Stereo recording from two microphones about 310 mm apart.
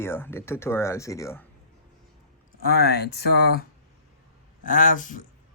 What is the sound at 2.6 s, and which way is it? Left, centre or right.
Speech, left.